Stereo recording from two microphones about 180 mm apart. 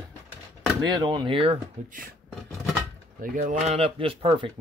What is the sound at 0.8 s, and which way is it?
Speech, 25° right (ahead or behind).